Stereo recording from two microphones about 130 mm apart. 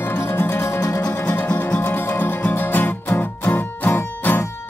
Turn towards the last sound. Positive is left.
turn(degrees=15)  # may be behind; listen again after turning